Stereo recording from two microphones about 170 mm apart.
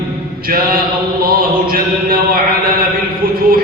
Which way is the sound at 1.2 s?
60° right (ahead or behind).